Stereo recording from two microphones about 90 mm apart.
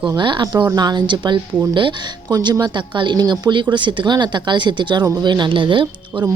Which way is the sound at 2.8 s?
65° right (ahead or behind).